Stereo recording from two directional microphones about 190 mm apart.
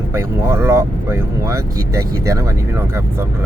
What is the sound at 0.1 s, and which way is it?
Speech, 15° right (ahead or behind).